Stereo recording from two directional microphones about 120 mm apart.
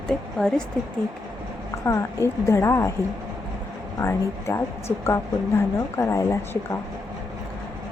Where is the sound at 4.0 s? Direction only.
20° left (ahead or behind).